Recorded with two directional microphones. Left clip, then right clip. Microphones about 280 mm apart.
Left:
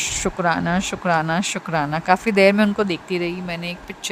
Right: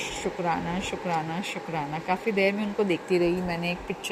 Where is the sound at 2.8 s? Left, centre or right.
Left.